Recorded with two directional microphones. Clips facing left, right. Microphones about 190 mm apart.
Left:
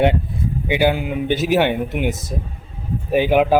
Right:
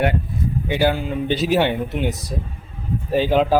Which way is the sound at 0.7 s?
15° left (ahead or behind).